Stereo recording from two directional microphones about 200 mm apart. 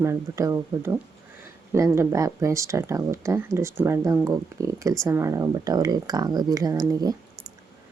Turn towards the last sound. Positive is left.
turn(degrees=-20)  # may be behind; listen again after turning